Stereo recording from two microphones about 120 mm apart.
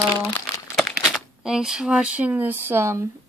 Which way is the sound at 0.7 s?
Centre (ahead or behind).